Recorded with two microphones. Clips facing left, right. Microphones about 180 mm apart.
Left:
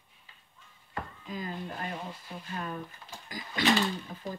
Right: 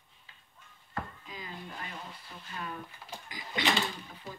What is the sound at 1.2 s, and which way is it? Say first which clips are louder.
Speech: left 7 dB; 45° left (ahead or behind).